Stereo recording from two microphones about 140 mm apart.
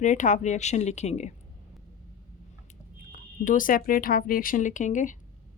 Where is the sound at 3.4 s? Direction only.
75° left (ahead or behind).